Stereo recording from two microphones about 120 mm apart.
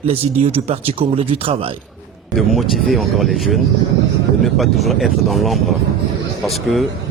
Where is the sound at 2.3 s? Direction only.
Centre (ahead or behind).